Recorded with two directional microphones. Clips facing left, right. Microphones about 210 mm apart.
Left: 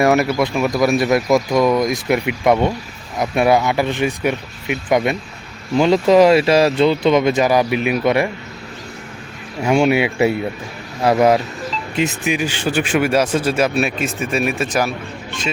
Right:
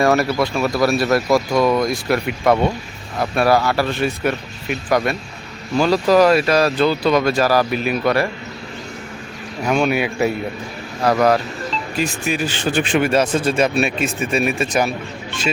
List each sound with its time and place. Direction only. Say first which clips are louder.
0.0 s speech: left 1 dB; 20° left (ahead or behind)
9.6 s speech: left 3 dB; 25° left (ahead or behind); by 14.9 s centre (ahead or behind)